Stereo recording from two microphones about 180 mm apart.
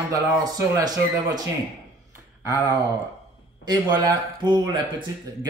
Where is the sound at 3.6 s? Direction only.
25° right (ahead or behind).